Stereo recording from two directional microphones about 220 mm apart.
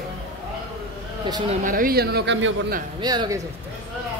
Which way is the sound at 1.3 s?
20° right (ahead or behind).